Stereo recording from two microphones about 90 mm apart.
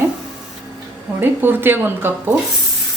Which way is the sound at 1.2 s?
20° right (ahead or behind).